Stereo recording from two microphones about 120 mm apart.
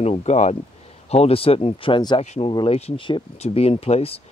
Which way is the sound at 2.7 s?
55° left (ahead or behind).